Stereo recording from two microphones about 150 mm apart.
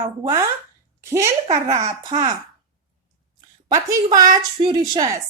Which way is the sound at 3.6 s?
25° right (ahead or behind).